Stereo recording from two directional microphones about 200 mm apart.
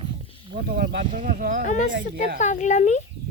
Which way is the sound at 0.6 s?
50° right (ahead or behind).